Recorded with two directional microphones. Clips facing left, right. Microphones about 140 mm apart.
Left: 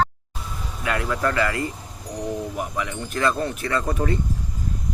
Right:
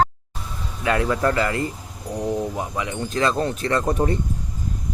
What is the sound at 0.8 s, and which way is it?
Speech, 25° right (ahead or behind).